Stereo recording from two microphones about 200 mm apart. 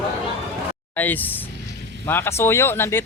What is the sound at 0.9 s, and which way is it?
Speech, 10° left (ahead or behind).